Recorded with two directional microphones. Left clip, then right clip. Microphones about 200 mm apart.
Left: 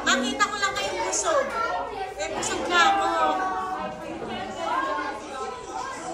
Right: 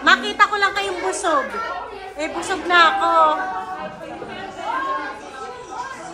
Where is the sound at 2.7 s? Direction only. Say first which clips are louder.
Right 6 dB; 15° right (ahead or behind).